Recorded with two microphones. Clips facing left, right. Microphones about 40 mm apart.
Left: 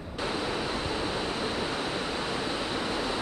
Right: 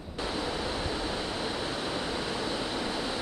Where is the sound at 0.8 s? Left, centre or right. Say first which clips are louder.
Left 2 dB; left.